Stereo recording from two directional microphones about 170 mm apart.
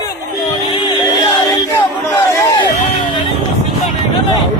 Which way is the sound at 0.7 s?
30° left (ahead or behind).